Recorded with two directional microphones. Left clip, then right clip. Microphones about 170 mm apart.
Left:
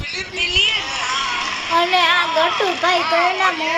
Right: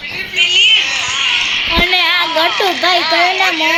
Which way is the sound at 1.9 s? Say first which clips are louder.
Right 3 dB; 45° right (ahead or behind).